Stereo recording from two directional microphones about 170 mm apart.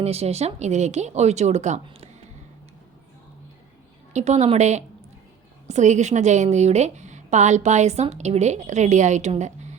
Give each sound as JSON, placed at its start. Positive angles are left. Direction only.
{"t": 0.0, "sound": "speech", "side_deg": -35}
{"t": 4.1, "sound": "a woman's voice", "side_deg": -40}